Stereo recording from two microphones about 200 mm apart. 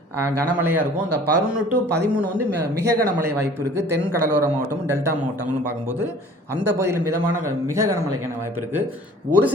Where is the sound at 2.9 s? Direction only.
45° right (ahead or behind).